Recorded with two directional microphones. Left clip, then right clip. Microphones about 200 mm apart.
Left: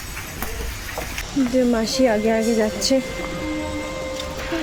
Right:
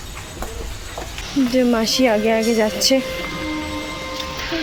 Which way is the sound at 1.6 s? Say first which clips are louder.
Right 1 dB; 10° right (ahead or behind).